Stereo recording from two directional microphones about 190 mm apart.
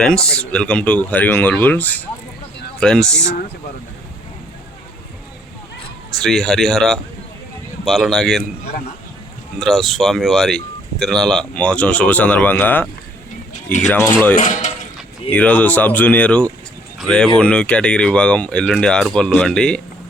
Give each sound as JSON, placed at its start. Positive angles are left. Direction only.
{"t": 0.0, "sound": "speech", "side_deg": 5}
{"t": 6.2, "sound": "speech", "side_deg": 0}
{"t": 9.6, "sound": "speech", "side_deg": 0}
{"t": 13.9, "sound": "speech", "side_deg": 10}
{"t": 14.3, "sound": "speech", "side_deg": 40}
{"t": 15.3, "sound": "speech", "side_deg": 5}